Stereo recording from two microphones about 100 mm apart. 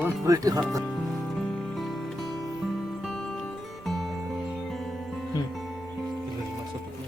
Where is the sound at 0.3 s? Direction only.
35° right (ahead or behind).